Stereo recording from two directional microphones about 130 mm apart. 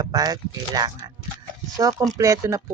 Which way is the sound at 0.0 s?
30° right (ahead or behind).